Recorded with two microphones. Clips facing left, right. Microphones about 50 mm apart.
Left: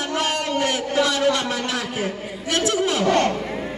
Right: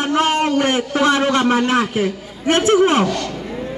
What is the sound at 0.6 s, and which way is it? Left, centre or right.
A man's voice, right.